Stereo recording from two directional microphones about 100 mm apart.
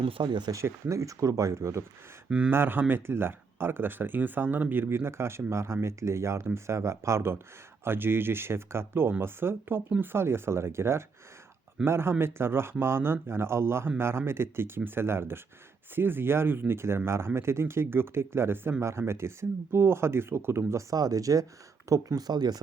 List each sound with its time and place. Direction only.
0.0 s speech: 55° right (ahead or behind)
0.5 s speech: 30° right (ahead or behind)